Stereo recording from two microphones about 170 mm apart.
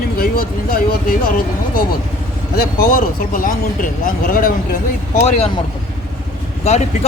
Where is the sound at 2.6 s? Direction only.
60° left (ahead or behind).